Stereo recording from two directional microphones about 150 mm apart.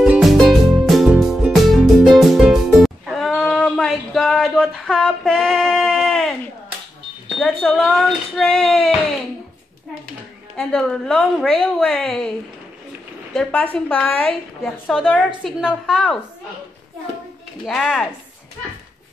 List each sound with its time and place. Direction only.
0.0 s music: 5° right (ahead or behind)
3.3 s a sound: 5° left (ahead or behind)
7.3 s a woman's voice: 5° left (ahead or behind)
10.7 s a woman's voice: 5° left (ahead or behind)
13.3 s a woman's voice: 5° left (ahead or behind)
17.6 s a woman's voice: centre (ahead or behind)